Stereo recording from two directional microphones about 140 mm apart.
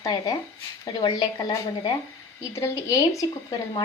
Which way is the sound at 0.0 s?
30° left (ahead or behind).